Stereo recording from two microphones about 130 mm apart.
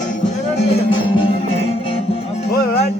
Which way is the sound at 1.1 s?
45° left (ahead or behind).